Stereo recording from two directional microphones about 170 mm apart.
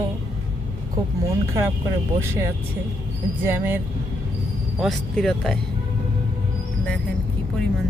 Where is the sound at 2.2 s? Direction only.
15° right (ahead or behind).